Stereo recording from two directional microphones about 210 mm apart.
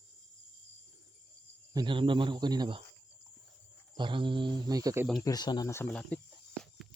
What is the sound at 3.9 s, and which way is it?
Speech, 25° right (ahead or behind).